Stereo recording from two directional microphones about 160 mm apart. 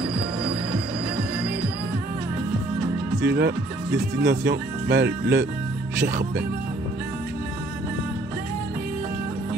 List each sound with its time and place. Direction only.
3.3 s speech: 90° right